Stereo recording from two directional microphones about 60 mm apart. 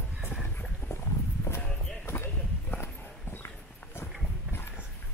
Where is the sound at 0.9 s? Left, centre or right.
Left.